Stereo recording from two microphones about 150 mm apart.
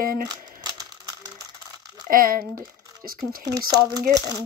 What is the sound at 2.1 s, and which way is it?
Speech, 75° right (ahead or behind).